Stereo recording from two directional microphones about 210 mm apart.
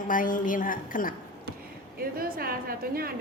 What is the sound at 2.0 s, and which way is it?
A woman's voice, 45° right (ahead or behind).